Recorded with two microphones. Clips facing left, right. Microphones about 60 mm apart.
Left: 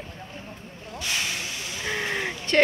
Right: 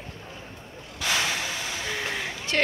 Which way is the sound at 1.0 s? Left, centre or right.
Right.